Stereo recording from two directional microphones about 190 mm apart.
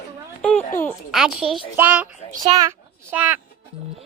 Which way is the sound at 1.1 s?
5° right (ahead or behind).